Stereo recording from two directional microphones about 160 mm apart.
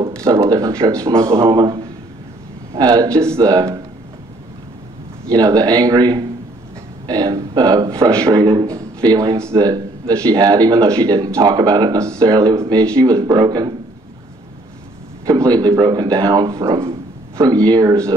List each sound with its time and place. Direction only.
0.1 s speech: 20° right (ahead or behind)
5.3 s speech: 25° right (ahead or behind)
15.2 s speech: 20° right (ahead or behind)